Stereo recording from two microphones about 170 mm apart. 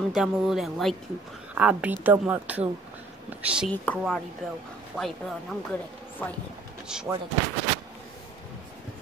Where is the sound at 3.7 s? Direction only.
10° left (ahead or behind).